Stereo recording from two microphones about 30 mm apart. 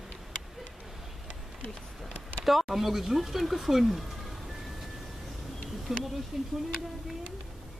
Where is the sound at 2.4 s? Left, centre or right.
Centre.